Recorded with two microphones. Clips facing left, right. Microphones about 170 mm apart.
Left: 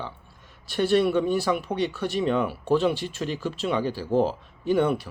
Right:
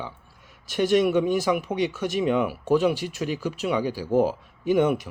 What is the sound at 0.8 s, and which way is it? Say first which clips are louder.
Speech: right 1 dB; 15° right (ahead or behind).